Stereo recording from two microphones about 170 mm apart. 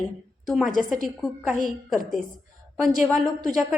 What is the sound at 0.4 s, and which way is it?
A woman's voice, centre (ahead or behind).